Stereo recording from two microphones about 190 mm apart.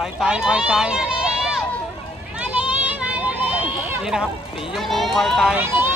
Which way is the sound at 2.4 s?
5° right (ahead or behind).